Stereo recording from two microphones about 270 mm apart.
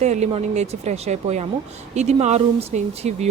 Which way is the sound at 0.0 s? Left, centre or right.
Right.